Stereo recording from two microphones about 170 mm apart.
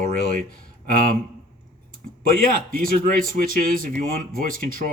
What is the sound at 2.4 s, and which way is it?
Speech, 55° right (ahead or behind).